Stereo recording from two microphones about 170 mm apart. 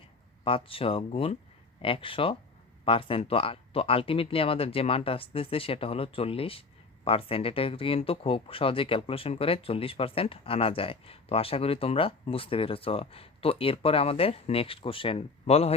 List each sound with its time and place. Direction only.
0.4 s speech: 30° left (ahead or behind)